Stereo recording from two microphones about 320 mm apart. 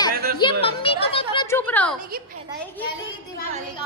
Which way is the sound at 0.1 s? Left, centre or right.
Right.